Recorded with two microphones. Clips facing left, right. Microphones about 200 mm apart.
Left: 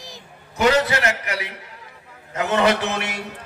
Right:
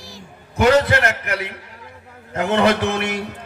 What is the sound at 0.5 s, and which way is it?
A man's voice, 55° right (ahead or behind).